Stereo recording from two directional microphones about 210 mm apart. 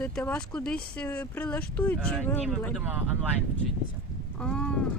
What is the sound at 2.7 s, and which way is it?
Speech, 10° right (ahead or behind).